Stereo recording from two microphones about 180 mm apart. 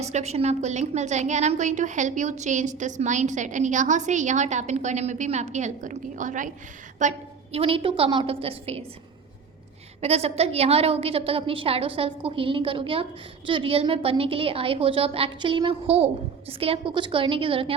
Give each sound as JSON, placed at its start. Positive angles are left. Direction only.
{"t": 0.0, "sound": "a woman's voice", "side_deg": -40}
{"t": 7.5, "sound": "a woman's voice", "side_deg": -30}
{"t": 10.0, "sound": "a woman's voice", "side_deg": -35}